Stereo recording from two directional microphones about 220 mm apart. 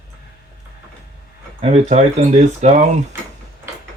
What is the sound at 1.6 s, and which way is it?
Speech, 30° right (ahead or behind).